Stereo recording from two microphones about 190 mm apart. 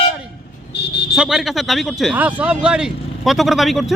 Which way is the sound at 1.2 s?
Centre (ahead or behind).